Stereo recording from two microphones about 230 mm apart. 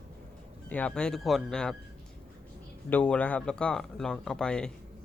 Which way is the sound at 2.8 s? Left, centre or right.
Centre.